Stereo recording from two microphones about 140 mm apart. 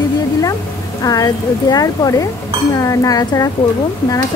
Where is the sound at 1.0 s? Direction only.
25° left (ahead or behind).